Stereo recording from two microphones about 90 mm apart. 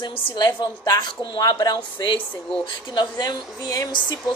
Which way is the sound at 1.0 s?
60° left (ahead or behind).